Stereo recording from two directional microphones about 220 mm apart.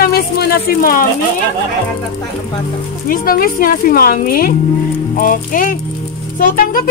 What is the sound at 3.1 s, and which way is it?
Speech, 40° left (ahead or behind).